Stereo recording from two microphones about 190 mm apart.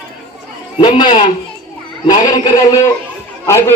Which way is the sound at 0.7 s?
25° left (ahead or behind).